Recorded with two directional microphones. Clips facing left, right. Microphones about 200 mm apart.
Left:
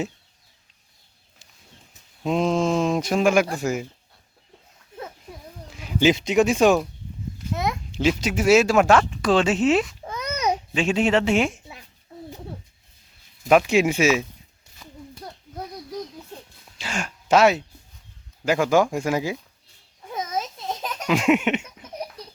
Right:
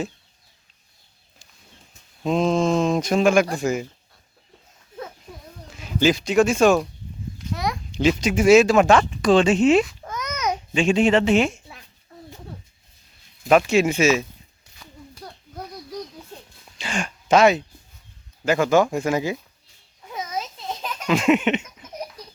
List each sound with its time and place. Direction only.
2.2 s speech: 10° left (ahead or behind)
5.7 s speech: 15° left (ahead or behind)
7.9 s speech: 5° left (ahead or behind)
10.1 s a sound: 30° left (ahead or behind)
10.8 s speech: 5° left (ahead or behind)
13.4 s speech: 5° left (ahead or behind)
16.7 s speech: 5° left (ahead or behind)
21.1 s speech: 10° left (ahead or behind)